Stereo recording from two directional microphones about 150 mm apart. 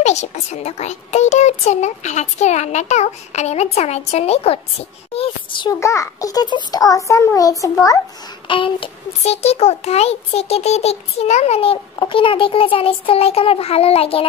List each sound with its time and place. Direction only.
0.0 s a child's voice: 50° left (ahead or behind)
5.7 s a child's voice: 20° left (ahead or behind)
8.5 s a child's voice: 35° left (ahead or behind)